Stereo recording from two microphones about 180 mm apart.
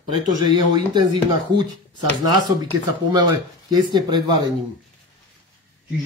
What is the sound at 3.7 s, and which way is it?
Speech, 25° right (ahead or behind).